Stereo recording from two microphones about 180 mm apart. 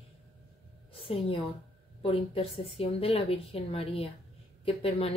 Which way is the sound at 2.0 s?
30° left (ahead or behind).